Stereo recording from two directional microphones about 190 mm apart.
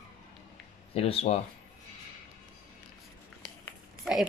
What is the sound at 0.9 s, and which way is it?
Speech, 30° left (ahead or behind).